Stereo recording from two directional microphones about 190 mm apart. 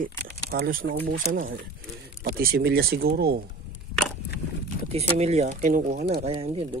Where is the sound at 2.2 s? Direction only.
55° right (ahead or behind).